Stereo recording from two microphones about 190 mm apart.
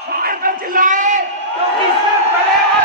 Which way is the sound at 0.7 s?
45° right (ahead or behind).